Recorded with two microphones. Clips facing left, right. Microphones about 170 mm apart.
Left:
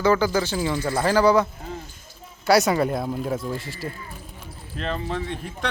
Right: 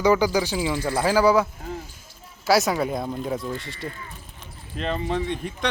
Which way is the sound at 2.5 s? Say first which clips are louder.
Left 2 dB; centre (ahead or behind).